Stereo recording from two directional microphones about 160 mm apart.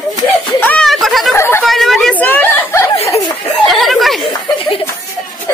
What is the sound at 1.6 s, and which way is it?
Speech, centre (ahead or behind).